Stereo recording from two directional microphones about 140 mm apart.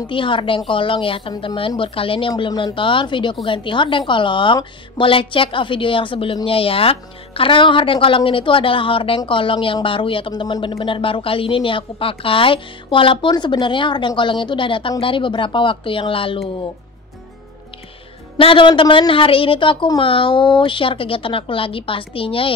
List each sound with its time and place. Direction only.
0.0 s a woman's voice: 35° left (ahead or behind)
18.4 s a woman's voice: 40° left (ahead or behind)